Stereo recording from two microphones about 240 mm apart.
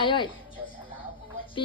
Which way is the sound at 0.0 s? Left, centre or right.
Centre.